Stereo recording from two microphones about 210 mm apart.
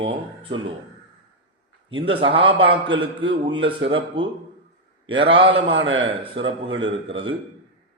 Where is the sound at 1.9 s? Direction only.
25° right (ahead or behind).